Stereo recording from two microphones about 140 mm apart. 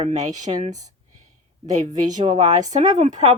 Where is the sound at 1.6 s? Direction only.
60° right (ahead or behind).